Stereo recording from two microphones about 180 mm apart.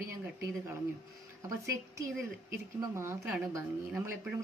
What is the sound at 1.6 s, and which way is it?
Speech, 15° right (ahead or behind).